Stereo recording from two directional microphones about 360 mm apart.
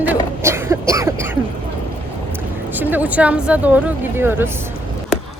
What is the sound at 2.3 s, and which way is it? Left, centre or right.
Speech, centre.